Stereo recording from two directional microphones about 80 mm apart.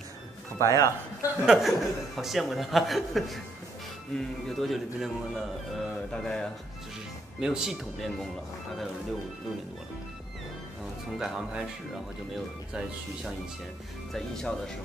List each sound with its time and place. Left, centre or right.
0.6 s speech: left
1.4 s speech: centre
7.3 s speech: centre
11.1 s speech: centre
14.1 s speech: centre